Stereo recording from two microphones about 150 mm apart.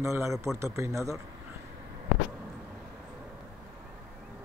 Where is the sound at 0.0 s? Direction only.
20° right (ahead or behind).